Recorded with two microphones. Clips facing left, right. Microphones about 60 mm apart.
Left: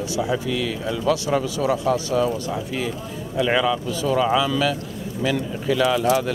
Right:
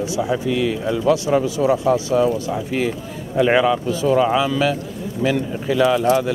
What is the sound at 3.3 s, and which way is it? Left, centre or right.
A man's voice, right.